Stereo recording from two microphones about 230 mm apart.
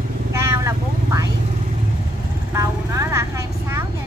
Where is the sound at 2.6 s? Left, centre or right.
Centre.